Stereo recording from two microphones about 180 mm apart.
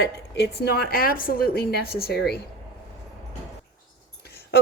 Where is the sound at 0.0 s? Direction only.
70° left (ahead or behind).